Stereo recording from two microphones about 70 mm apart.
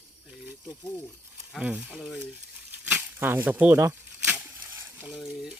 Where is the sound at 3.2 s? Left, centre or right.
Right.